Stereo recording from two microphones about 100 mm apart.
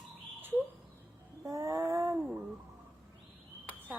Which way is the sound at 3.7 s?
15° left (ahead or behind).